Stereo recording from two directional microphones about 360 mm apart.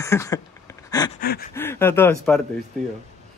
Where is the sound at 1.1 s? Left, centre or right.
Left.